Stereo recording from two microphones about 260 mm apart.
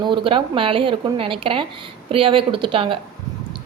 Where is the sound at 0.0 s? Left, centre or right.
Centre.